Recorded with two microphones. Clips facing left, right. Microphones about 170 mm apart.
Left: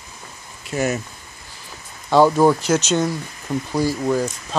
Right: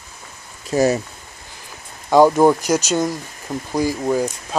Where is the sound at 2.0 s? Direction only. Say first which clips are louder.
Right 2 dB; 15° right (ahead or behind).